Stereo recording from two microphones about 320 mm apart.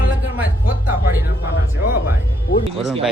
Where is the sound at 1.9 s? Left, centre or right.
Left.